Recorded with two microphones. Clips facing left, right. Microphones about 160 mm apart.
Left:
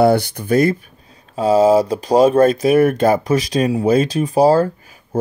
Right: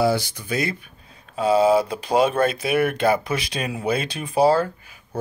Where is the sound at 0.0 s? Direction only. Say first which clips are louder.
Left 7 dB; 60° left (ahead or behind).